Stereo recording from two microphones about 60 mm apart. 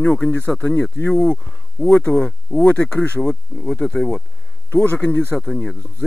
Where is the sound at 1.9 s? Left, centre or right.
Left.